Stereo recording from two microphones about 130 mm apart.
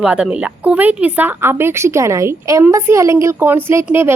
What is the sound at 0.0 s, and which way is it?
A woman's voice, 5° right (ahead or behind).